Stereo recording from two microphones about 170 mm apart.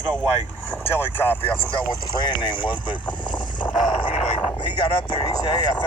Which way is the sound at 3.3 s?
25° left (ahead or behind).